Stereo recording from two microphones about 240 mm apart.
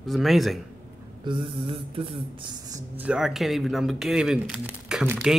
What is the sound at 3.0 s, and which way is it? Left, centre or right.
Speech, centre.